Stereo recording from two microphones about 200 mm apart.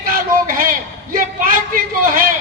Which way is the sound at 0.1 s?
45° right (ahead or behind).